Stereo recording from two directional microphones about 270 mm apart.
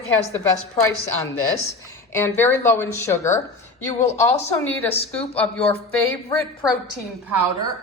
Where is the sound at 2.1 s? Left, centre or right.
Centre.